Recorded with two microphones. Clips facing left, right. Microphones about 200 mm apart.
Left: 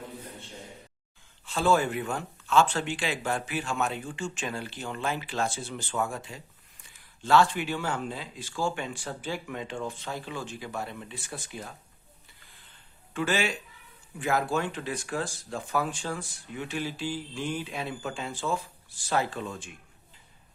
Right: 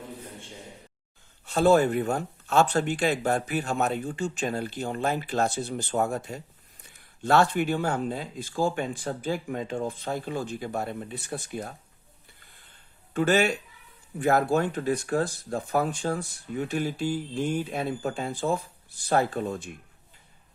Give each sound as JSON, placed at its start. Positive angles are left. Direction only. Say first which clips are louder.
{"t": 1.5, "sound": "speech", "louder": "right 5 dB", "side_deg": -40}
{"t": 7.2, "sound": "speech", "louder": "right 1 dB", "side_deg": -60}
{"t": 7.4, "sound": "speech", "louder": "right 5 dB", "side_deg": -45}
{"t": 10.1, "sound": "speech", "louder": "right 6 dB", "side_deg": -45}
{"t": 12.4, "sound": "a sound", "louder": "even", "side_deg": -50}
{"t": 13.1, "sound": "speech", "louder": "right 6 dB", "side_deg": -40}
{"t": 18.3, "sound": "speech", "louder": "right 3 dB", "side_deg": -35}
{"t": 19.1, "sound": "speech", "louder": "right 4 dB", "side_deg": -55}